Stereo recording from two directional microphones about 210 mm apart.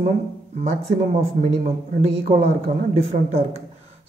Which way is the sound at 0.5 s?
30° right (ahead or behind).